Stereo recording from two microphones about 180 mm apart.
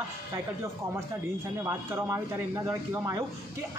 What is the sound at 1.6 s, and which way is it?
A woman's voice, 15° right (ahead or behind).